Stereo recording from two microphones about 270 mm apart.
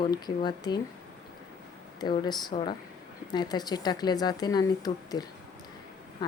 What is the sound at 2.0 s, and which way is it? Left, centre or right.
A woman's voice, centre.